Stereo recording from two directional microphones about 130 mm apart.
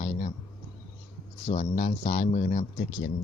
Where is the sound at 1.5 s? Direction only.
70° left (ahead or behind).